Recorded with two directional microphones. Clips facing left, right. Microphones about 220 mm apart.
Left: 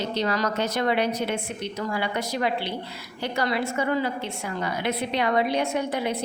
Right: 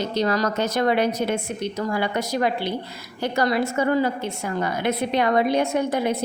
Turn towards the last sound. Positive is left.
turn(degrees=-45)  # may be behind; listen again after turning